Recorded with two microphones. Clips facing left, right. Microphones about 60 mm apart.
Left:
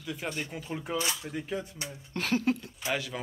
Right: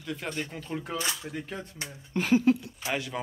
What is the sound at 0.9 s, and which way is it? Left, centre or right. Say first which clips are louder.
Speech: left 2 dB; right.